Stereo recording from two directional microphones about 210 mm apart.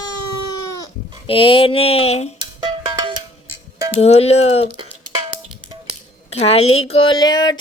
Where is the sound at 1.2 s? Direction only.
25° left (ahead or behind).